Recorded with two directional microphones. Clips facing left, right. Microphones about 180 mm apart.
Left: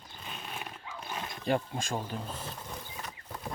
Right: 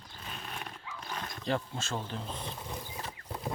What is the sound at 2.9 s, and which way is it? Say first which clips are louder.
Mechanisms: right 2 dB; 30° right (ahead or behind).